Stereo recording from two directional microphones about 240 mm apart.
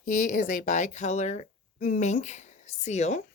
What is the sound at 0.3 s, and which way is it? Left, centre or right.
Speech, left.